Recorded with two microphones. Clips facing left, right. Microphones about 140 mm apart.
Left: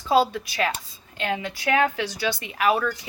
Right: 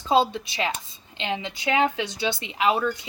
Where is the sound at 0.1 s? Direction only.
20° right (ahead or behind).